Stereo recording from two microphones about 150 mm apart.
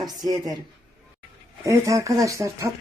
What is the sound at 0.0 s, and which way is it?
Speech, 25° right (ahead or behind).